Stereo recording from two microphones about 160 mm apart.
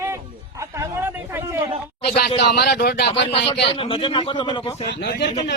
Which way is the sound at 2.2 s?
85° left.